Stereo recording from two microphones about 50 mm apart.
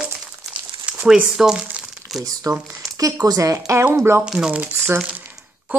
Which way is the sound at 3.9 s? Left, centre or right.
Right.